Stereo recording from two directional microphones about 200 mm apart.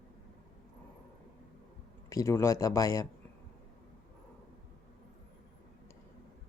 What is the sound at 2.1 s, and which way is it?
Speech, 15° left (ahead or behind).